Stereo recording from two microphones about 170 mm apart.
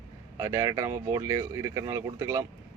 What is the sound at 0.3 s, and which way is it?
Speech, 15° right (ahead or behind).